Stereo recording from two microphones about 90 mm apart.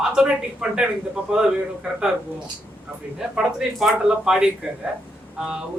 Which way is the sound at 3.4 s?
10° right (ahead or behind).